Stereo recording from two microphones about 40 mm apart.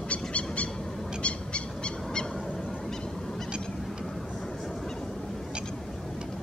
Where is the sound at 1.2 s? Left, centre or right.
Left.